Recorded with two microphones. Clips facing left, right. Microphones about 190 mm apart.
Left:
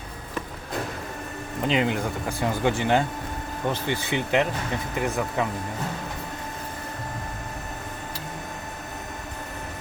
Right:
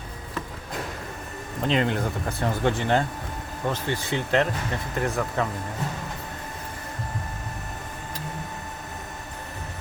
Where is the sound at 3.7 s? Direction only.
20° left (ahead or behind).